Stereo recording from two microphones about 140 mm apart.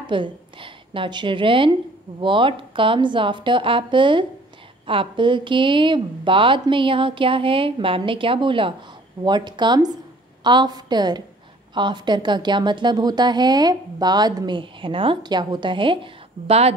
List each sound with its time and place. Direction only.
0.0 s a woman's voice: 35° right (ahead or behind)